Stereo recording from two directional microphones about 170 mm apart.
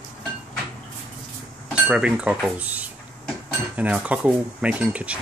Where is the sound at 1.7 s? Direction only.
5° right (ahead or behind).